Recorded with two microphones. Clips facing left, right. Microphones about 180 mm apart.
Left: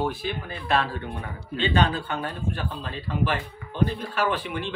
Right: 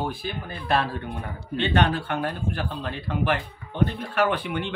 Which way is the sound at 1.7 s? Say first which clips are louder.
Right 2 dB; 65° right (ahead or behind).